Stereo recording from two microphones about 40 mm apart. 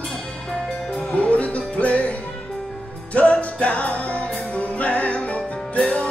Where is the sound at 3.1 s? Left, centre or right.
Left.